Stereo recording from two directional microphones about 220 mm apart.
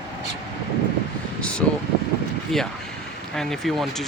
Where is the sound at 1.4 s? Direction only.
5° left (ahead or behind).